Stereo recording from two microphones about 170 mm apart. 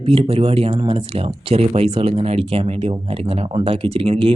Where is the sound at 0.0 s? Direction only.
35° right (ahead or behind).